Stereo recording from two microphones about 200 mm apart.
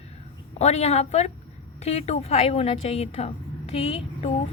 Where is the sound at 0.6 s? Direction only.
35° left (ahead or behind).